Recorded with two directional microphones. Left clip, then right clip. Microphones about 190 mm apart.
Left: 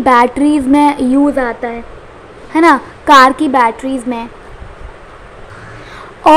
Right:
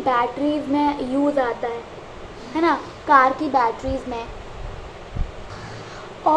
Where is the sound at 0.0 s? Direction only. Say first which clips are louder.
Left 11 dB; 50° left (ahead or behind).